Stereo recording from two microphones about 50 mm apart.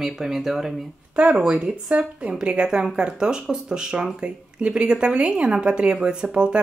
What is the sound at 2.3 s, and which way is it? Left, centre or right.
Speech, centre.